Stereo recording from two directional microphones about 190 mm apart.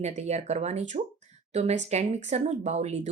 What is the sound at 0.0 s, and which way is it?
Speech, 35° right (ahead or behind).